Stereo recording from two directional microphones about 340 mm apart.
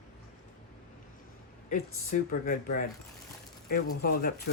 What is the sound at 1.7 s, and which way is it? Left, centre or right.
Speech, left.